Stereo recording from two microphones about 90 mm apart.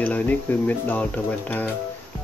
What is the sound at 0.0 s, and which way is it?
Speech, 20° left (ahead or behind).